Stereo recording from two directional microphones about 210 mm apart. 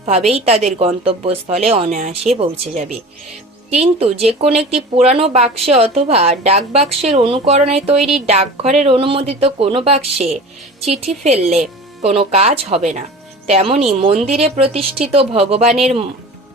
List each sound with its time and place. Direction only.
0.3 s speech: 30° right (ahead or behind)